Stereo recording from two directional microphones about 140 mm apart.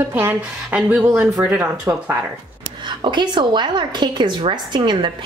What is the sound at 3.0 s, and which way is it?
A woman's voice, 35° right (ahead or behind).